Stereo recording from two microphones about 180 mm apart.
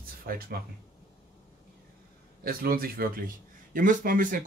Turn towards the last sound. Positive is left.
turn(degrees=-50)  # may be behind; listen again after turning